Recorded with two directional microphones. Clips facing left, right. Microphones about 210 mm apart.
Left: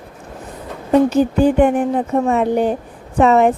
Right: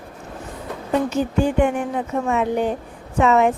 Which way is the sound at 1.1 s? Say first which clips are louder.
Left 6 dB; 35° left (ahead or behind).